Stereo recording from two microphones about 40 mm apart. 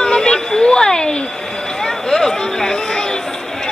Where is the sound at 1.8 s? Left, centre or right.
Centre.